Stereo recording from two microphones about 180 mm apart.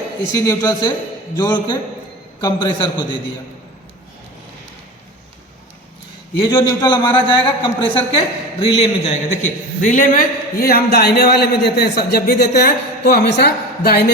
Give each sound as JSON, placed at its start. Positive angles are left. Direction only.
{"t": 0.3, "sound": "a woman's voice", "side_deg": 20}
{"t": 6.5, "sound": "a woman's voice", "side_deg": 25}